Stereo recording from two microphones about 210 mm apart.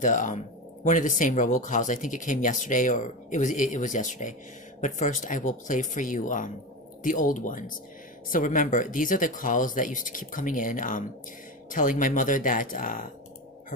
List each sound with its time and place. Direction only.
0.0 s speech: 35° left (ahead or behind)